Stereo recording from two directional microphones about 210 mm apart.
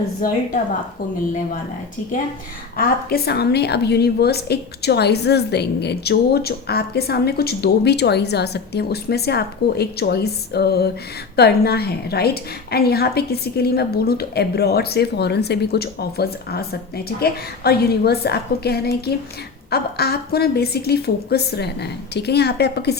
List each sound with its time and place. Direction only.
0.2 s a woman's voice: 40° left (ahead or behind)
2.7 s a woman's voice: 45° left (ahead or behind)